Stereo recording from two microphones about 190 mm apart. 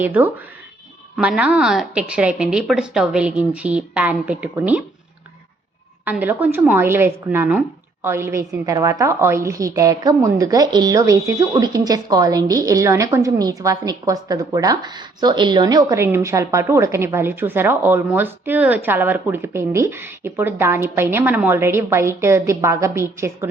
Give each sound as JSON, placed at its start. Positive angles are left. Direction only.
{"t": 0.0, "sound": "a woman's voice", "side_deg": -10}
{"t": 6.1, "sound": "a woman's voice", "side_deg": -10}